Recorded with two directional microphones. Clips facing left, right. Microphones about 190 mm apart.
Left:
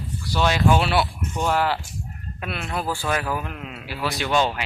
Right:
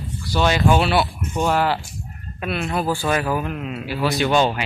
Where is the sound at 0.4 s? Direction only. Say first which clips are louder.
Right 2 dB; 10° right (ahead or behind).